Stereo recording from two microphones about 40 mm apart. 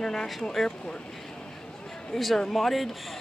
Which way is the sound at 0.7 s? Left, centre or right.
Left.